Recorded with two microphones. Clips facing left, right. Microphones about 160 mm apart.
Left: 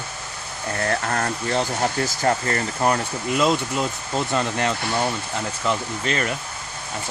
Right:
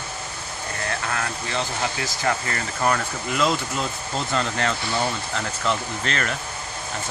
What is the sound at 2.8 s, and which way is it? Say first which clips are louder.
Speech: left 1 dB; 30° left (ahead or behind).